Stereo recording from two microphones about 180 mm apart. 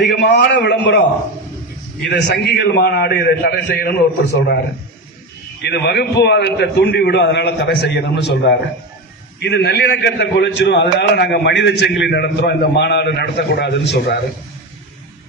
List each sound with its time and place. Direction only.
0.1 s a man's voice: 70° left (ahead or behind)
2.0 s a man's voice: 70° left (ahead or behind)
5.6 s a man's voice: 65° left (ahead or behind)